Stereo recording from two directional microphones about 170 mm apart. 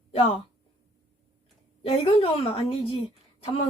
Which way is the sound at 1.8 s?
35° left (ahead or behind).